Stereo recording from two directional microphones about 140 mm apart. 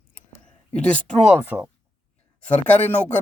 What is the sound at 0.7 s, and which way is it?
Speech, 5° left (ahead or behind).